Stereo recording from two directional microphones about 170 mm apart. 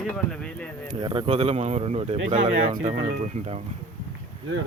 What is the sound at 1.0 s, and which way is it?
Speech, 30° right (ahead or behind).